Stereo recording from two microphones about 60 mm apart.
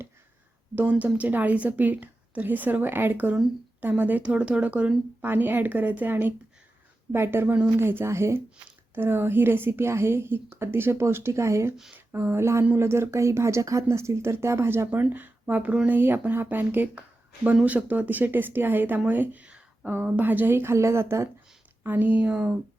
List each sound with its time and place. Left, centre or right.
0.8 s a woman's voice: right
5.2 s a woman's voice: right
11.9 s speech: right
14.8 s a woman's voice: right
19.5 s a sound: centre
20.1 s speech: right
21.8 s a woman's voice: right